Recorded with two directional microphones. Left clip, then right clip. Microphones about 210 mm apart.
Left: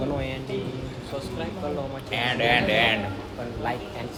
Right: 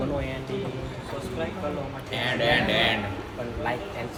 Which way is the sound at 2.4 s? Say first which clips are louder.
Left 1 dB; 50° left (ahead or behind).